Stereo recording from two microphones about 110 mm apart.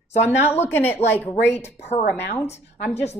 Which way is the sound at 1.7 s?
75° left (ahead or behind).